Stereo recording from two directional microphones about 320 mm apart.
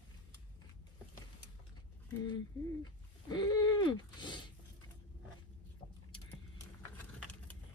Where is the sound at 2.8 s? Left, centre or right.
Centre.